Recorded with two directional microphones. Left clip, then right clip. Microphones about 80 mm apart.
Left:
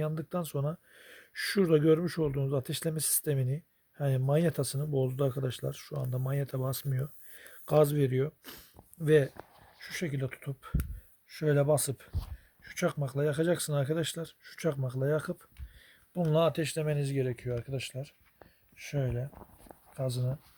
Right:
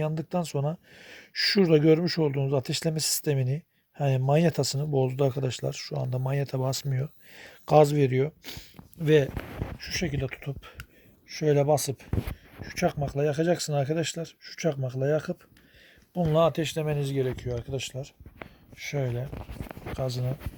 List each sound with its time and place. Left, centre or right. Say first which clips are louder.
0.0 s speech: right 5 dB; right
10.2 s speech: right 4 dB; right
11.3 s speech: right 4 dB; centre
16.3 s speech: right 4 dB; right